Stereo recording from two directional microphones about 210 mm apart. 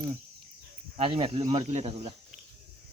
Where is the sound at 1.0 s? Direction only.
25° right (ahead or behind).